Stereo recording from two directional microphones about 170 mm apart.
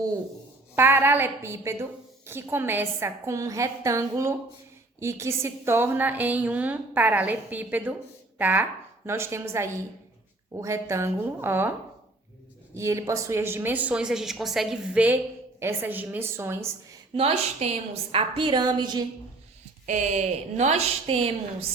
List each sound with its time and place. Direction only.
0.8 s a woman's voice: 10° right (ahead or behind)
12.7 s a woman's voice: 15° right (ahead or behind)
17.2 s a woman's voice: 35° right (ahead or behind)
19.8 s a woman's voice: 45° right (ahead or behind)